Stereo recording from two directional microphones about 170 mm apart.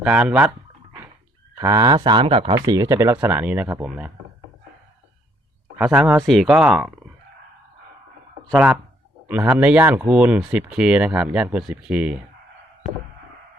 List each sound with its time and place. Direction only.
0.0 s speech: 5° right (ahead or behind)
1.5 s speech: 20° right (ahead or behind)
2.6 s speech: 20° right (ahead or behind)
5.7 s speech: 5° right (ahead or behind)
8.5 s speech: 5° right (ahead or behind)